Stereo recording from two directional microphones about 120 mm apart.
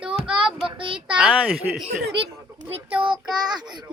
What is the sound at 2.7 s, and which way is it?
Child singing, 45° right (ahead or behind).